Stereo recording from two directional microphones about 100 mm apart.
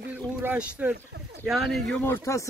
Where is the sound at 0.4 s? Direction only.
15° right (ahead or behind).